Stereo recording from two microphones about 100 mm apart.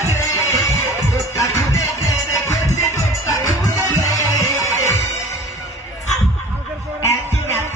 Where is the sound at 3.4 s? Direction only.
35° left (ahead or behind).